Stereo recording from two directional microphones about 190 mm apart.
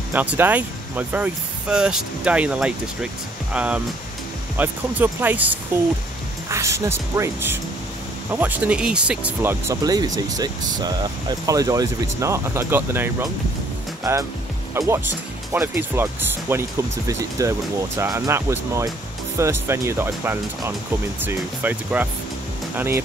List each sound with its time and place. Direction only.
0.1 s speech: 10° right (ahead or behind)
14.7 s speech: 15° right (ahead or behind)